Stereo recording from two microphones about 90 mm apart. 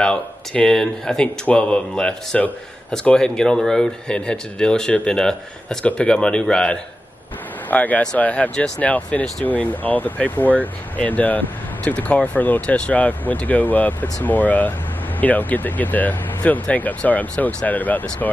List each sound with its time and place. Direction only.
0.0 s speech: 10° left (ahead or behind)